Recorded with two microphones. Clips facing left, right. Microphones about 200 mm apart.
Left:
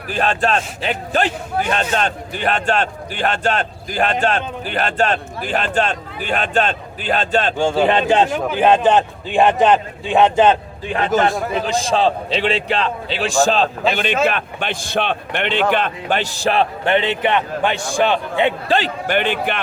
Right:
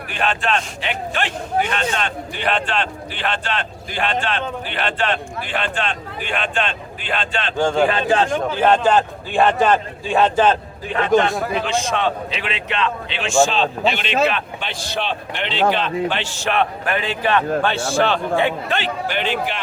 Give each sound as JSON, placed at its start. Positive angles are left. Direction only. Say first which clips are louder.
{"t": 0.1, "sound": "a man's voice", "louder": "left 3 dB", "side_deg": 40}
{"t": 7.5, "sound": "a man's voice", "louder": "right 2 dB", "side_deg": 10}
{"t": 8.5, "sound": "a man's voice", "louder": "left 2 dB", "side_deg": 15}
{"t": 11.1, "sound": "speech", "louder": "right 1 dB", "side_deg": 0}
{"t": 11.5, "sound": "a man's voice", "louder": "left 3 dB", "side_deg": 35}
{"t": 19.0, "sound": "speech", "louder": "left 3 dB", "side_deg": 55}